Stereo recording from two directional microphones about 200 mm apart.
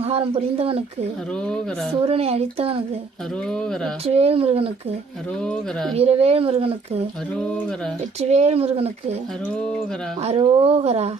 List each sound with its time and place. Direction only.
0.0 s speech: 30° right (ahead or behind)
1.3 s a woman's voice: 5° left (ahead or behind)
1.9 s speech: 30° right (ahead or behind)
3.4 s a woman's voice: 5° left (ahead or behind)
4.0 s speech: 30° right (ahead or behind)
5.4 s a woman's voice: 5° left (ahead or behind)
6.0 s speech: 30° right (ahead or behind)
7.3 s a woman's voice: 5° left (ahead or behind)
8.2 s speech: 35° right (ahead or behind)
10.2 s speech: 30° right (ahead or behind)